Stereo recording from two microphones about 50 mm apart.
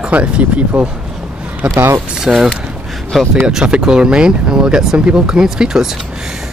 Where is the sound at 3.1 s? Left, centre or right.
Centre.